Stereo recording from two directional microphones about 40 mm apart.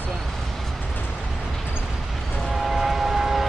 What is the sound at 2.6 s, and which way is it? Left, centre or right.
Train, centre.